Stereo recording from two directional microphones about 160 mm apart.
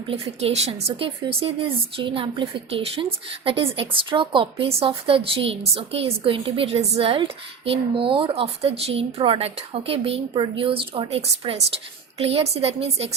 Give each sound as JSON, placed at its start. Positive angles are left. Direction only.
{"t": 0.1, "sound": "speech", "side_deg": -40}